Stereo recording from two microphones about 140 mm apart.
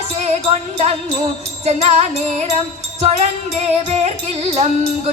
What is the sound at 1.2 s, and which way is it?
Music, 50° right (ahead or behind).